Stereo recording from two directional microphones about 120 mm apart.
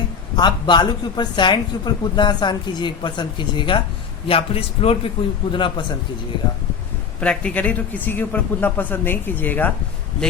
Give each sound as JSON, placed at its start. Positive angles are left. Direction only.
{"t": 0.3, "sound": "speech", "side_deg": 40}
{"t": 4.3, "sound": "a man's voice", "side_deg": 50}
{"t": 7.2, "sound": "a man's voice", "side_deg": 10}